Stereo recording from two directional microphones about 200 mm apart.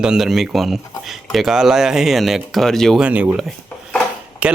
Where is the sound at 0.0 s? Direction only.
5° right (ahead or behind).